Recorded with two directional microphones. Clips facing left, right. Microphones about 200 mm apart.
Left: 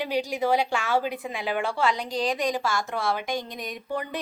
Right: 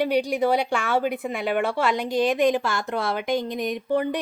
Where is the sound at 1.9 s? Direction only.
5° right (ahead or behind).